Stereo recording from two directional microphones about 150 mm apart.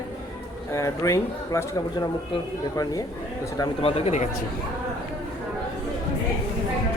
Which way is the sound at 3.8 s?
40° left (ahead or behind).